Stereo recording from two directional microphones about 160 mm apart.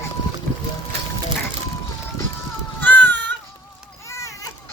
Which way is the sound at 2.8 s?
10° left (ahead or behind).